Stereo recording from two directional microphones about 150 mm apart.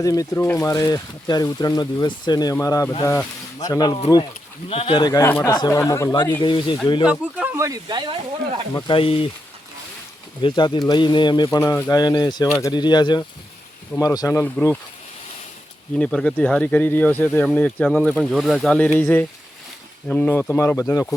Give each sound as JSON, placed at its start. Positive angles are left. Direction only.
{"t": 0.0, "sound": "speech", "side_deg": 25}
{"t": 4.7, "sound": "speech", "side_deg": 35}
{"t": 6.4, "sound": "speech", "side_deg": 30}
{"t": 7.0, "sound": "speech", "side_deg": -10}
{"t": 8.9, "sound": "speech", "side_deg": 35}
{"t": 10.4, "sound": "speech", "side_deg": 35}
{"t": 16.0, "sound": "speech", "side_deg": 5}